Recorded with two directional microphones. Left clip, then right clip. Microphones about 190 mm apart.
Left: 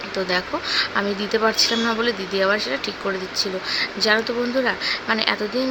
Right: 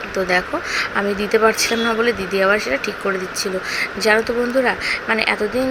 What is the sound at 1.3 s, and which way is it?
Speech, 5° right (ahead or behind).